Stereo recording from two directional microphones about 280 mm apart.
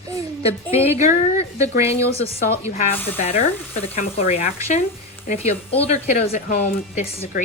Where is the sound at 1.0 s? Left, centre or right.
Left.